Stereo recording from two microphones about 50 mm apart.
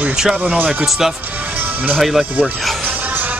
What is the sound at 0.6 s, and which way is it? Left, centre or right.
Speech, right.